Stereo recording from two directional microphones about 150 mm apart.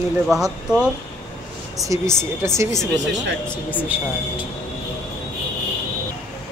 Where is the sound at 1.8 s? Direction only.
20° right (ahead or behind).